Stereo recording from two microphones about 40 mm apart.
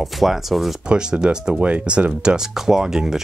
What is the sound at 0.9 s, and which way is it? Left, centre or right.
Speech, right.